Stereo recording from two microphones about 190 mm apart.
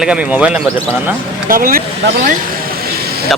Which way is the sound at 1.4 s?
50° right (ahead or behind).